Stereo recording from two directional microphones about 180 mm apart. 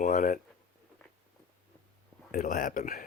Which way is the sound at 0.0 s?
50° left (ahead or behind).